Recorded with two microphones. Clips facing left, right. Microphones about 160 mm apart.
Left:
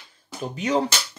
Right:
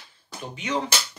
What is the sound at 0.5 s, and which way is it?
Speech, 40° left (ahead or behind).